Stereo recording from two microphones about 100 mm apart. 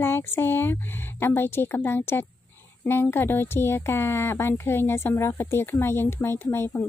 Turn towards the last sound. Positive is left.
turn(degrees=25)  # may be behind; listen again after turning